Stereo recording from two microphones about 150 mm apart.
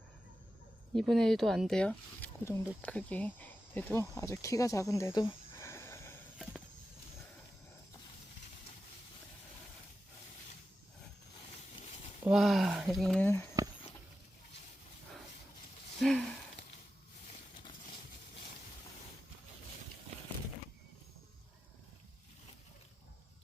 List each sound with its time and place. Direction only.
0.9 s speech: centre (ahead or behind)
2.4 s speech: 20° left (ahead or behind)
12.3 s speech: centre (ahead or behind)
13.2 s speech: 15° left (ahead or behind)
16.0 s speech: 5° left (ahead or behind)